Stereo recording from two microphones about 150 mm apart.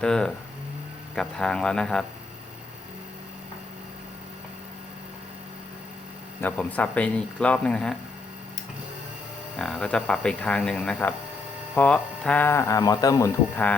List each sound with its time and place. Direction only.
0.0 s speech: 5° left (ahead or behind)
6.4 s speech: 10° left (ahead or behind)
9.6 s speech: 5° left (ahead or behind); by 13.3 s 25° left (ahead or behind)